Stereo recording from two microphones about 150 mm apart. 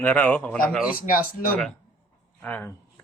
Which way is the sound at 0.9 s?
70° left (ahead or behind).